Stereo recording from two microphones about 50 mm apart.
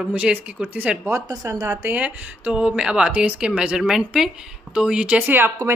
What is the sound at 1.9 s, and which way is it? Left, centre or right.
Speech, right.